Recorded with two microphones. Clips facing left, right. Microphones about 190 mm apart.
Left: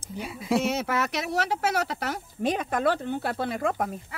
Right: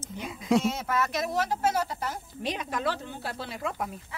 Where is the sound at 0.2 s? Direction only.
5° left (ahead or behind).